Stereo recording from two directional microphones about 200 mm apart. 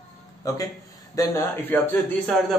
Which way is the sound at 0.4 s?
15° left (ahead or behind).